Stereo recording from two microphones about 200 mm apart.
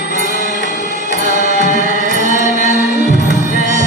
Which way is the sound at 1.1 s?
40° right (ahead or behind).